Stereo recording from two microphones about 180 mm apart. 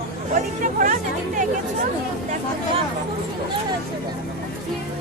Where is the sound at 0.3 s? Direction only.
45° right (ahead or behind).